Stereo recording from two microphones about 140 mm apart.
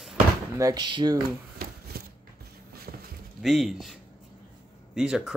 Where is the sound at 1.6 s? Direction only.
90° right.